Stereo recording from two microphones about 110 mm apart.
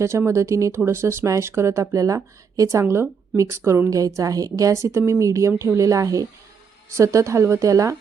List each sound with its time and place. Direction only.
0.0 s a woman's voice: 25° right (ahead or behind)